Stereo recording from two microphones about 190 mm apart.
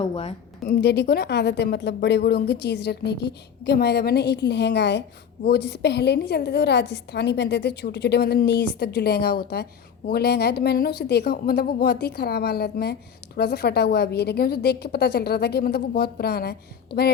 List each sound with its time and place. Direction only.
0.0 s a woman's voice: 35° left (ahead or behind)
0.6 s speech: 55° left (ahead or behind)